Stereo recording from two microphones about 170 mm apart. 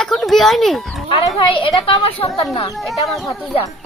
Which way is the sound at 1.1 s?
30° left (ahead or behind).